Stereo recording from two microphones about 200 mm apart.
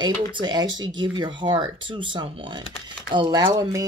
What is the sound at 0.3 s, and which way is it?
Speech, 20° right (ahead or behind).